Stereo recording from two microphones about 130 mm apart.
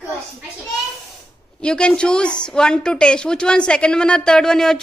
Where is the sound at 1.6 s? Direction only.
5° left (ahead or behind).